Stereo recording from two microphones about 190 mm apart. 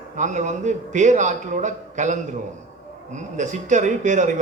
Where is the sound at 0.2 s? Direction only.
40° right (ahead or behind).